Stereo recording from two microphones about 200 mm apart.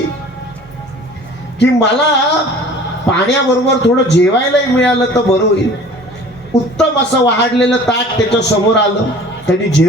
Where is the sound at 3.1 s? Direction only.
60° left (ahead or behind).